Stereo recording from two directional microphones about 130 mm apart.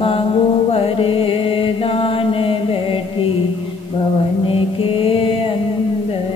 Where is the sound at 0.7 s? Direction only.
45° left (ahead or behind).